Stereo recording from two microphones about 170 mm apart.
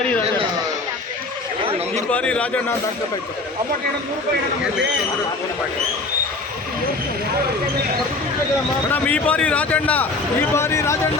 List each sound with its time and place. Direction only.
2.0 s a man's voice: 5° left (ahead or behind)
8.9 s a man's voice: 10° left (ahead or behind)